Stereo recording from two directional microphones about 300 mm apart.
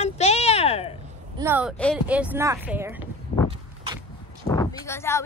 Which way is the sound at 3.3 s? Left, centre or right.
Left.